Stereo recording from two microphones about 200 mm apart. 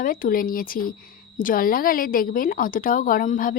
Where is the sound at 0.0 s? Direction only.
45° left (ahead or behind).